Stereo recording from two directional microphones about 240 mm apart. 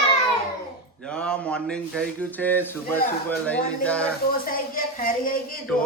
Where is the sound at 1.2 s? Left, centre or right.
Centre.